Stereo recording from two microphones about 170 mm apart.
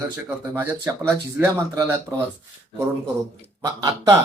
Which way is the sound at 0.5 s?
15° right (ahead or behind).